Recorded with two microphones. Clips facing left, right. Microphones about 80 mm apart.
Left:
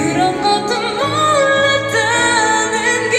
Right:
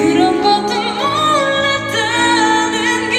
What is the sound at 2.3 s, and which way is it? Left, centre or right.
Music, left.